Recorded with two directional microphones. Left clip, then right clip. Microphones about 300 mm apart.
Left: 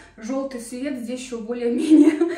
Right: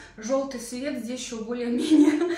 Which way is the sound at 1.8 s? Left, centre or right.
Left.